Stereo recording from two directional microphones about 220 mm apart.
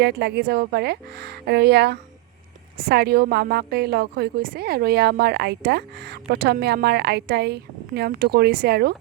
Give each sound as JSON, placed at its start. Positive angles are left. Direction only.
{"t": 0.0, "sound": "a woman's voice", "side_deg": -50}